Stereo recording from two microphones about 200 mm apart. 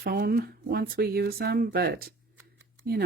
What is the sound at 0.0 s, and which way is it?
Speech, 50° right (ahead or behind).